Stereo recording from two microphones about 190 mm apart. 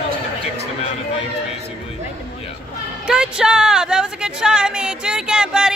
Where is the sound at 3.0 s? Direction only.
5° right (ahead or behind).